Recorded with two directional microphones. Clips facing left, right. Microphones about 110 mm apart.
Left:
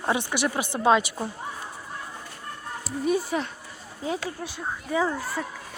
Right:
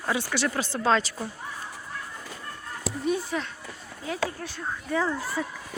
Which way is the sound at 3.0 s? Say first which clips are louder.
Left 3 dB; 5° left (ahead or behind).